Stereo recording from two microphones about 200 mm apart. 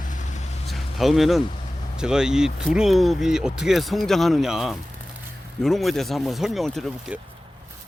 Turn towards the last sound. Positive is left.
turn(degrees=0)  # may be behind; listen again after turning